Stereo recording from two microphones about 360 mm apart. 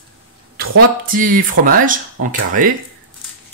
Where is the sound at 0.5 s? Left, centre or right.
Right.